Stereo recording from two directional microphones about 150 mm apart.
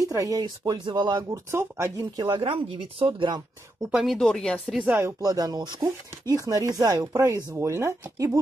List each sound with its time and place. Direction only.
0.0 s speech: 20° right (ahead or behind)
1.5 s speech: 15° right (ahead or behind)
2.1 s speech: 30° right (ahead or behind)
3.8 s speech: centre (ahead or behind)
4.8 s speech: 15° right (ahead or behind)